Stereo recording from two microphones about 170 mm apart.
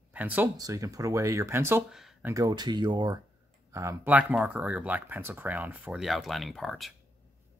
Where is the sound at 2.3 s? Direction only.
20° right (ahead or behind); by 6.9 s centre (ahead or behind).